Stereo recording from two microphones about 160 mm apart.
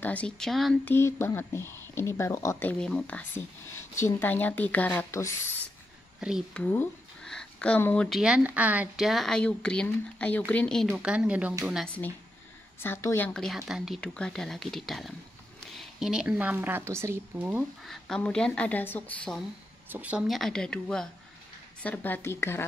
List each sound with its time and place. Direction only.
0.0 s speech: 10° left (ahead or behind)
0.8 s speech: 15° left (ahead or behind)
8.2 s speech: 5° right (ahead or behind)
10.9 s a woman's voice: 5° right (ahead or behind)
11.8 s a woman's voice: 10° left (ahead or behind); by 17.9 s 10° right (ahead or behind)
18.0 s speech: 5° left (ahead or behind)
19.9 s speech: 10° right (ahead or behind); by 22.7 s 15° left (ahead or behind)